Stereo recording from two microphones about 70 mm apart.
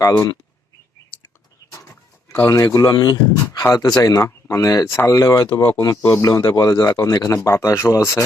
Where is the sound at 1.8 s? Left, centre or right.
Left.